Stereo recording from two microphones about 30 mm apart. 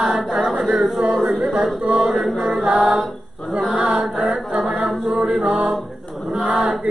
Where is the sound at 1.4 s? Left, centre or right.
Right.